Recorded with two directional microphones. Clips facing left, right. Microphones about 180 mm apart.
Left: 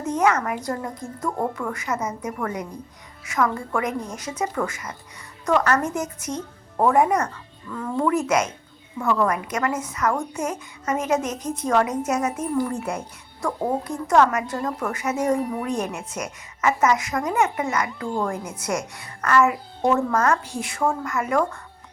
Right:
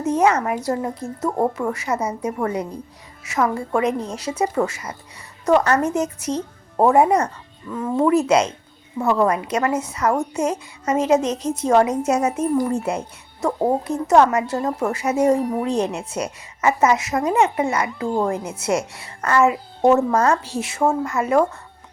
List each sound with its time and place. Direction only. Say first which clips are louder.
0.2 s a woman's voice: right 1 dB; 25° right (ahead or behind)